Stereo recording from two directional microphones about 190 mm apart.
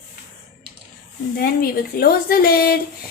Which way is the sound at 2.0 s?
50° left (ahead or behind).